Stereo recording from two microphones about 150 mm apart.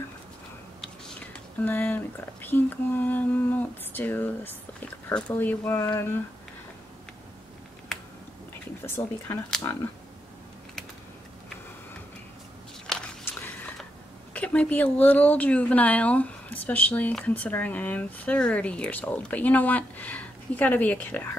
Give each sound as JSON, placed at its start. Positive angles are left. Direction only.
{"t": 0.7, "sound": "speech", "side_deg": 5}
{"t": 8.8, "sound": "speech", "side_deg": 15}
{"t": 12.8, "sound": "walk", "side_deg": 5}
{"t": 14.3, "sound": "speech", "side_deg": 10}